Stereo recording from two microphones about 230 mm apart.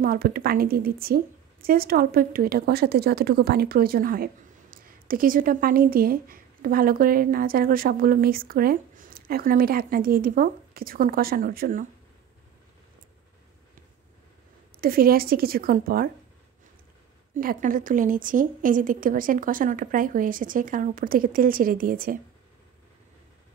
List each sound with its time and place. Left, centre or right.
0.0 s a woman's voice: right
14.8 s a woman's voice: right
17.3 s a woman's voice: right